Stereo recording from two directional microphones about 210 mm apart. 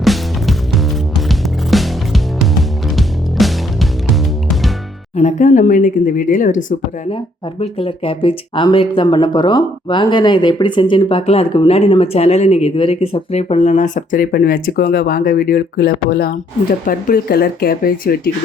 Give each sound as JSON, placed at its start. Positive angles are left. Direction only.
{"t": 0.0, "sound": "music", "side_deg": 0}
{"t": 5.1, "sound": "speech", "side_deg": 35}
{"t": 7.6, "sound": "speech", "side_deg": 25}